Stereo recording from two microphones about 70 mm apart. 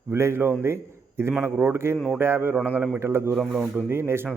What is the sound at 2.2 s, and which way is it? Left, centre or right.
Speech, right.